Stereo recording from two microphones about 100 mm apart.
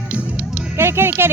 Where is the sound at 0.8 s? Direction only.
25° right (ahead or behind).